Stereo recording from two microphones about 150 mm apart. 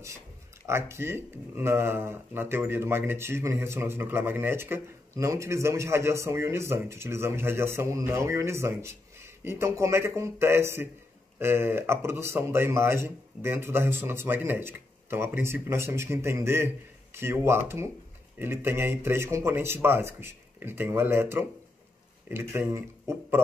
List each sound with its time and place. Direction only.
0.7 s speech: 15° right (ahead or behind)